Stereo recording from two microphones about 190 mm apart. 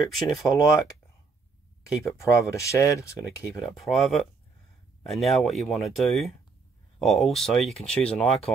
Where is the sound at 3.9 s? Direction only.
Centre (ahead or behind).